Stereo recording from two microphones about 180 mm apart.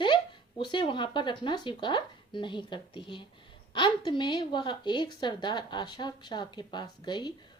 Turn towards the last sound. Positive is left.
turn(degrees=25)  # may be behind; listen again after turning